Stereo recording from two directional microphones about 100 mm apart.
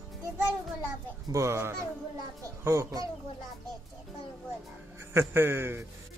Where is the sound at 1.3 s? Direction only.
30° right (ahead or behind).